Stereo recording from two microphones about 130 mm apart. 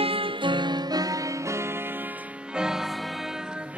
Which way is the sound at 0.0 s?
45° right (ahead or behind).